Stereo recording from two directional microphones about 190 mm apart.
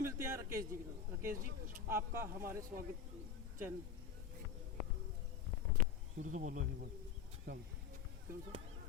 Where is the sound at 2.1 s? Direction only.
15° right (ahead or behind).